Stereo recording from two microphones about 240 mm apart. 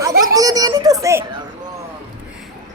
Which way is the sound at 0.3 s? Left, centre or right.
Centre.